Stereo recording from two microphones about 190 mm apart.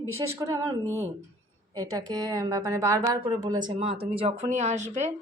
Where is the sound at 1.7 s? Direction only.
20° right (ahead or behind).